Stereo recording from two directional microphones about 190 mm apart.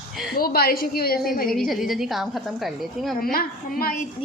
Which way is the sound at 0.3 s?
50° left (ahead or behind).